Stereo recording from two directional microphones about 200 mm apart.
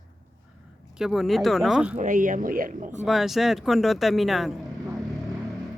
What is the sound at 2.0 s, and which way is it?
Speech, 40° right (ahead or behind).